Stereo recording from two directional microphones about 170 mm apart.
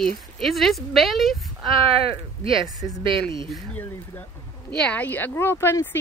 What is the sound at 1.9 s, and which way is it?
Speech, 35° right (ahead or behind).